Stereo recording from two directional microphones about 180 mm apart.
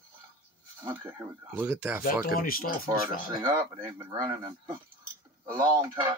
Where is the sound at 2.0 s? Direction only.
55° left (ahead or behind).